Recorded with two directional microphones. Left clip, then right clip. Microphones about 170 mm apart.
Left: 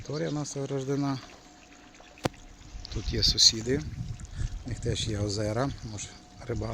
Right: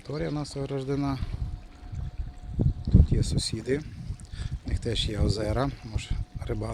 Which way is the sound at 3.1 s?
15° right (ahead or behind).